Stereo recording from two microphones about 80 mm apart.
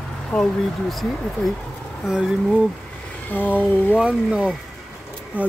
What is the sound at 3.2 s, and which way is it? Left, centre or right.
Speech, left.